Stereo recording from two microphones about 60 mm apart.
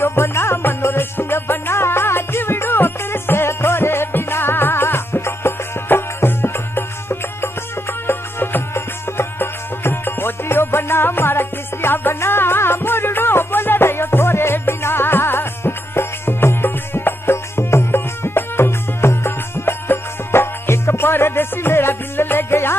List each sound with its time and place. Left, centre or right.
0.0 s music: left